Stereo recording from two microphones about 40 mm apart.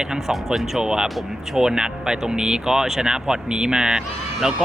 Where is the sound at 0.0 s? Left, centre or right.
Centre.